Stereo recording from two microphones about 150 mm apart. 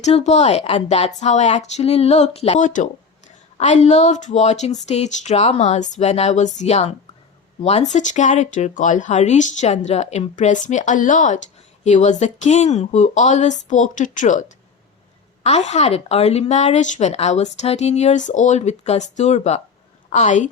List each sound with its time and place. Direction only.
0.0 s a woman's voice: 50° left (ahead or behind)